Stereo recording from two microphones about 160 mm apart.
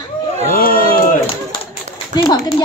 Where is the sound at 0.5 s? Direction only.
65° left (ahead or behind).